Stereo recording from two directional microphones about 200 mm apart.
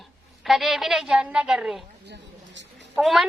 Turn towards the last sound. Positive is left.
turn(degrees=0)  # may be behind; listen again after turning